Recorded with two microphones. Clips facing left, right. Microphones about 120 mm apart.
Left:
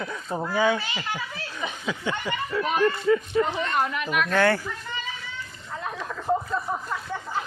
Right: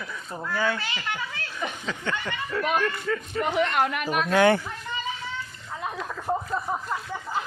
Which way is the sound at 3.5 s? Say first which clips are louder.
Right 2 dB; 70° right (ahead or behind).